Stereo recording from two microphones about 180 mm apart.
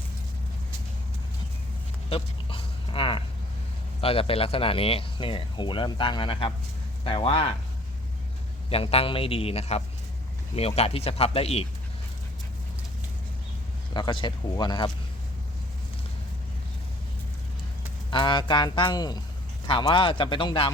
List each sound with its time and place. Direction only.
2.0 s a sound: 30° left (ahead or behind)
4.0 s speech: 30° left (ahead or behind)
8.7 s speech: 35° left (ahead or behind)
13.9 s speech: 25° left (ahead or behind)
18.1 s speech: 25° left (ahead or behind)